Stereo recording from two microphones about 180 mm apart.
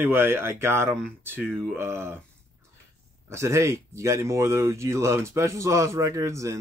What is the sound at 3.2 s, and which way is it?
Speech, 15° right (ahead or behind).